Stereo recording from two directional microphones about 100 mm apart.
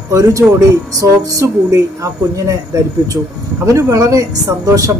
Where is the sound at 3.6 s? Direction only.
30° right (ahead or behind).